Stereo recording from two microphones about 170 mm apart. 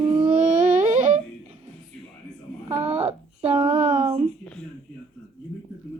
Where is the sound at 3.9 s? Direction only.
40° right (ahead or behind).